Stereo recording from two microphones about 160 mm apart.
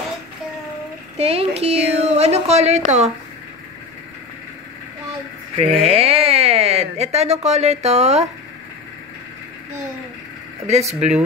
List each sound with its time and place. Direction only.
1.1 s a woman's voice: 40° right (ahead or behind)
5.6 s speech: 40° right (ahead or behind)
10.7 s speech: 45° right (ahead or behind)